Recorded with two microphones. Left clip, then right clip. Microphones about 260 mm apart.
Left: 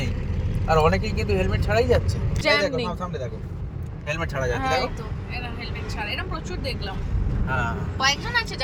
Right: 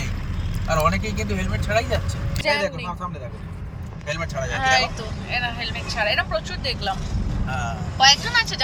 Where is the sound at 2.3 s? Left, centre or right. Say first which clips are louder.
Left 1 dB; centre.